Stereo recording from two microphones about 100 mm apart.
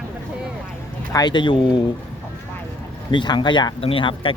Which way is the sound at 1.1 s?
40° left (ahead or behind).